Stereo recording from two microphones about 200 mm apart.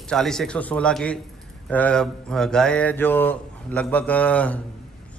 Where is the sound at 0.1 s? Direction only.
Centre (ahead or behind).